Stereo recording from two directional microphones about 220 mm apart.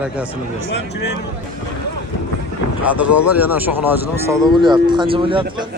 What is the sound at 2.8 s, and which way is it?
Speech, 5° right (ahead or behind).